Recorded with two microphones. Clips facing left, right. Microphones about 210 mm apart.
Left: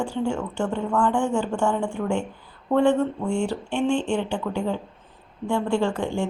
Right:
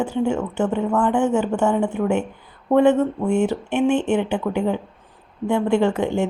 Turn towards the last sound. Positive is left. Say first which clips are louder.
# right 5 dB
turn(degrees=-20)  # may be behind; listen again after turning